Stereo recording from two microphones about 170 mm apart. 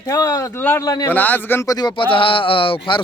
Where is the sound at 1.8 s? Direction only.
30° left (ahead or behind).